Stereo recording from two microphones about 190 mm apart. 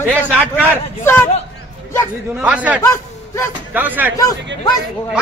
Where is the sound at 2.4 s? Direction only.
10° right (ahead or behind).